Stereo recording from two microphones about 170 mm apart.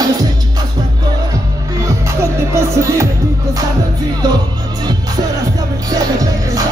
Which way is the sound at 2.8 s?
20° right (ahead or behind).